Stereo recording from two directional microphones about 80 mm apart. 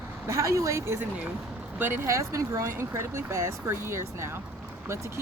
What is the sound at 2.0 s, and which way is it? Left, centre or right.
Speech, right.